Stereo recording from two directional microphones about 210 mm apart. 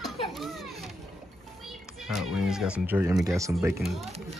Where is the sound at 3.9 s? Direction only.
30° right (ahead or behind).